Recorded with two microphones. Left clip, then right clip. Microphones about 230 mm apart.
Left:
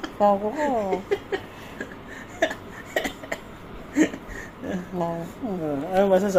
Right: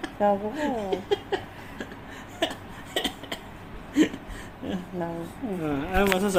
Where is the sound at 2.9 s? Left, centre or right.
Centre.